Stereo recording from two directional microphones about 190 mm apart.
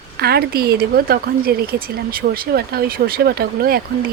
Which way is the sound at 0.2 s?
55° right (ahead or behind).